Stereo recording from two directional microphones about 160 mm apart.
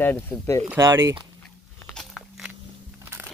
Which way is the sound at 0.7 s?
15° right (ahead or behind).